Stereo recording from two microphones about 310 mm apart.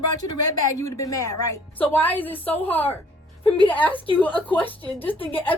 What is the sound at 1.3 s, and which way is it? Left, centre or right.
Speech, left.